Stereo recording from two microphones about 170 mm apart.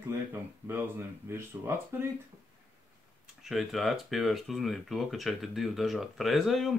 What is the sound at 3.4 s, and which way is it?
Speech, centre (ahead or behind).